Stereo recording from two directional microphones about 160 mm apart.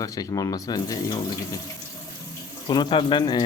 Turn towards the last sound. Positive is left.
turn(degrees=30)  # may be behind; listen again after turning